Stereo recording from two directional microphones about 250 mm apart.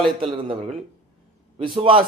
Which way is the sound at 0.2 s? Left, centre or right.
Right.